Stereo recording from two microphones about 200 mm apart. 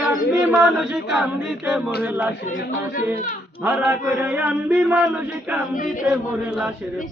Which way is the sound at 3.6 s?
10° right (ahead or behind).